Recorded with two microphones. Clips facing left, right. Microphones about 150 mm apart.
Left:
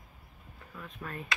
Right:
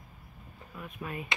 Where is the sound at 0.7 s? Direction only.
10° right (ahead or behind).